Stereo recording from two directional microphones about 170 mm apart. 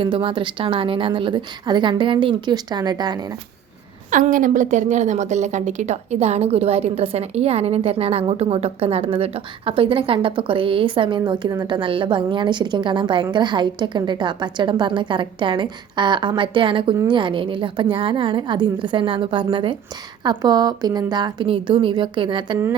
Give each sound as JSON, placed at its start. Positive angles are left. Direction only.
{"t": 0.0, "sound": "a woman's voice", "side_deg": -30}
{"t": 4.1, "sound": "a woman's voice", "side_deg": -55}